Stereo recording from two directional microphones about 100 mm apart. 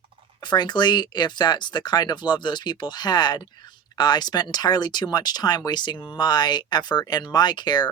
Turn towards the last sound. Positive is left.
turn(degrees=45)  # may be behind; listen again after turning